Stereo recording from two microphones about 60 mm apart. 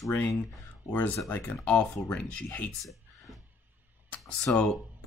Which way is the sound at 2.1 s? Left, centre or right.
Left.